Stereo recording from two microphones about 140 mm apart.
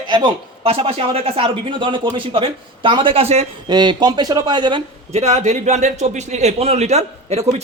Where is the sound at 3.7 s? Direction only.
30° right (ahead or behind).